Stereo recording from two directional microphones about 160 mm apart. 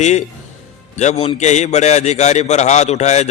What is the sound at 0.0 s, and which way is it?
A man's voice, 45° left (ahead or behind).